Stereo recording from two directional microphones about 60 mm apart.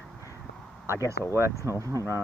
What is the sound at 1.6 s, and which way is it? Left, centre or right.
Speech, left.